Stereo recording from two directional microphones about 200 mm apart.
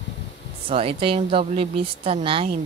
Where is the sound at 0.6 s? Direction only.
30° right (ahead or behind).